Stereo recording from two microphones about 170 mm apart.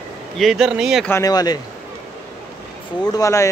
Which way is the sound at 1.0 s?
20° left (ahead or behind).